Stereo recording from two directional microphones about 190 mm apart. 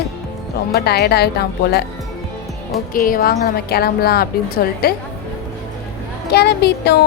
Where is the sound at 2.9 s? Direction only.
50° left (ahead or behind).